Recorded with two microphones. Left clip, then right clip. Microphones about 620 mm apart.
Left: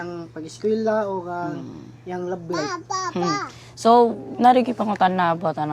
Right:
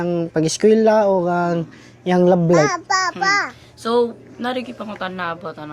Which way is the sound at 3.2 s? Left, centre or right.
Right.